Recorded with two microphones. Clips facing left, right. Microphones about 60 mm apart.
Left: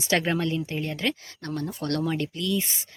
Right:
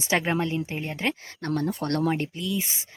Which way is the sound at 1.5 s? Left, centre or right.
Right.